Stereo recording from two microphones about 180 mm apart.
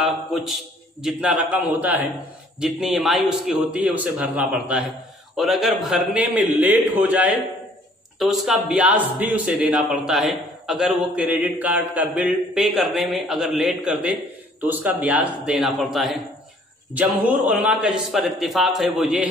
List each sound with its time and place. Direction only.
0.0 s a man's voice: centre (ahead or behind)